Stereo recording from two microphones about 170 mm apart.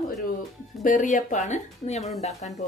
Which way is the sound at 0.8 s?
50° left (ahead or behind).